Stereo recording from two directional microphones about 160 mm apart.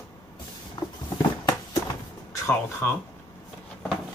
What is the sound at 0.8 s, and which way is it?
Vehicle, 25° left (ahead or behind).